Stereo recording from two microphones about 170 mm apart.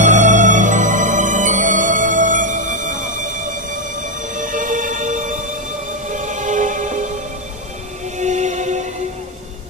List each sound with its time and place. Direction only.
0.0 s music: 45° right (ahead or behind)
8.2 s music: 45° right (ahead or behind)